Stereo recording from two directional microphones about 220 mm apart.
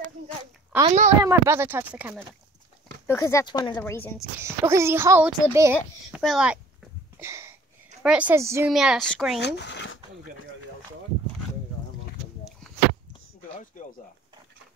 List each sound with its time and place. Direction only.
0.8 s speech: 30° right (ahead or behind)
1.2 s a child's voice: 10° right (ahead or behind)
3.1 s speech: 15° left (ahead or behind)
4.4 s a child's voice: 10° right (ahead or behind)
7.2 s a sound: 10° right (ahead or behind)
8.0 s a child's voice: 5° right (ahead or behind)
8.7 s speech: centre (ahead or behind)
9.4 s speech: 50° left (ahead or behind)
13.4 s a sound: 35° left (ahead or behind)